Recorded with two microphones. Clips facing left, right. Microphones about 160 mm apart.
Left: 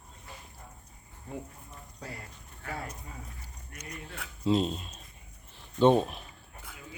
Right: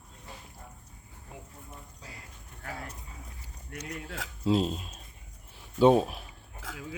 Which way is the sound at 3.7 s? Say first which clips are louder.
Right 5 dB; 90° right.